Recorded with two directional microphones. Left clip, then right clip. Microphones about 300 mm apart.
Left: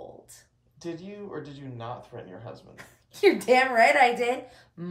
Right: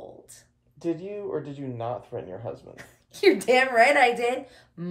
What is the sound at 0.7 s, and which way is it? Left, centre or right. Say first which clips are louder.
Speech: right 7 dB; right.